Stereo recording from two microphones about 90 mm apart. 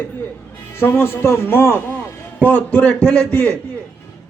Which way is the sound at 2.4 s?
15° left (ahead or behind).